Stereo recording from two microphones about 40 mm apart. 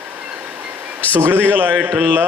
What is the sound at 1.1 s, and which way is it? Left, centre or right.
A man's voice, right.